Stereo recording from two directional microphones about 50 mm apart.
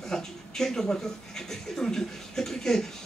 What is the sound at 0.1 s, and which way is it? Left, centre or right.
Speech, centre.